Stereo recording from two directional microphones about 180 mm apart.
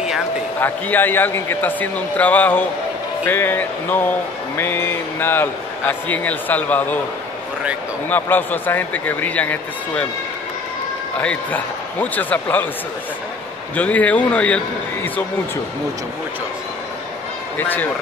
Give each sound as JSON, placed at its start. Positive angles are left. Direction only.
{"t": 0.6, "sound": "a man's voice", "side_deg": 10}
{"t": 8.1, "sound": "a man's voice", "side_deg": 10}
{"t": 11.1, "sound": "a man's voice", "side_deg": 10}
{"t": 13.7, "sound": "a man's voice", "side_deg": 10}
{"t": 17.6, "sound": "a man's voice", "side_deg": 10}